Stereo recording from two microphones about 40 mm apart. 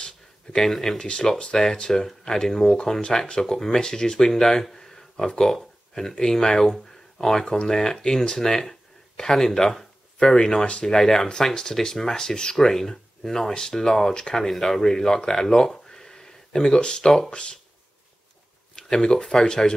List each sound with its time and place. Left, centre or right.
0.0 s a sound: centre
0.7 s speech: centre
0.9 s speech: left
17.3 s speech: left
18.8 s speech: left